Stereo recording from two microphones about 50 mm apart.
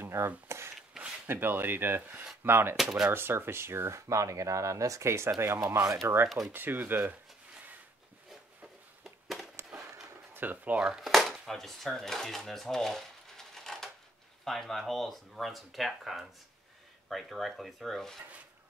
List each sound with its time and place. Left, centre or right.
0.0 s a sound: right
0.5 s wood: right
1.2 s speech: right
2.4 s speech: right
2.7 s speech: centre
3.1 s speech: right
6.2 s speech: centre
6.5 s speech: right
9.0 s a sound: centre
10.3 s speech: right
11.0 s speech: centre